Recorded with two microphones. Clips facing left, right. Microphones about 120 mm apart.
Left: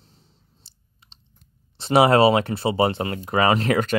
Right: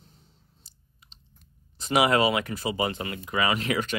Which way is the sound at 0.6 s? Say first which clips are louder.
Left 2 dB; 30° left (ahead or behind).